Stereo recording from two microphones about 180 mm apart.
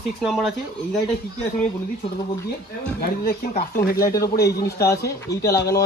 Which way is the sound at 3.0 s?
55° left (ahead or behind).